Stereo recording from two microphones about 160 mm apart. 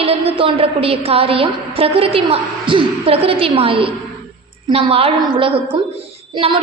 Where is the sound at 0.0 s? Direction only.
35° right (ahead or behind).